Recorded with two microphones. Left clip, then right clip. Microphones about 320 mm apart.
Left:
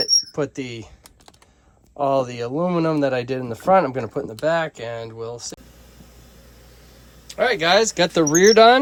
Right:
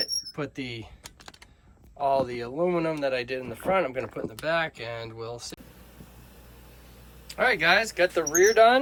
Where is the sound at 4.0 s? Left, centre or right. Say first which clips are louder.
Left 7 dB; centre.